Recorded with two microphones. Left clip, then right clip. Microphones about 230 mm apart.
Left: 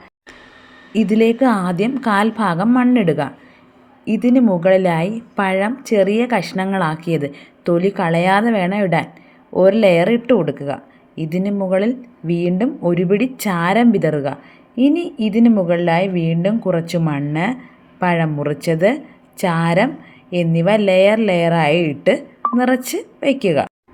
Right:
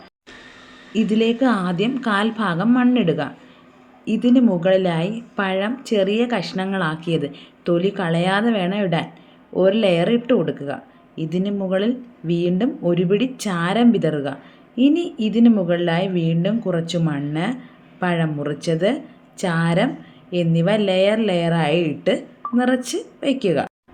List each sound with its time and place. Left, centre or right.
1.2 s a woman's voice: left
4.0 s a woman's voice: left
4.4 s a woman's voice: left
11.1 s speech: left
11.4 s a woman's voice: left